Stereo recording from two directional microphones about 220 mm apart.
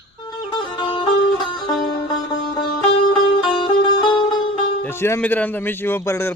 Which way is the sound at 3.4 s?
20° left (ahead or behind).